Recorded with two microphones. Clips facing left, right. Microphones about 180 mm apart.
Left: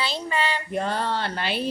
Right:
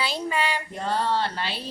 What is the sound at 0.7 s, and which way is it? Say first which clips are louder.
Speech: right 1 dB; 60° left (ahead or behind).